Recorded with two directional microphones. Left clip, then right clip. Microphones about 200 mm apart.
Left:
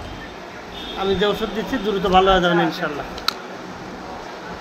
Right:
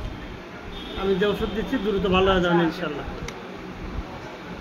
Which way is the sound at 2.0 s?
15° right (ahead or behind).